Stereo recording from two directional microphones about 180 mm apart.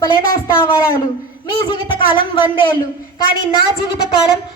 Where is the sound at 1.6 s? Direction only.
25° left (ahead or behind).